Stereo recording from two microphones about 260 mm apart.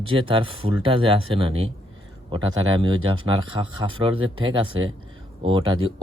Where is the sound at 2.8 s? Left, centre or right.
Centre.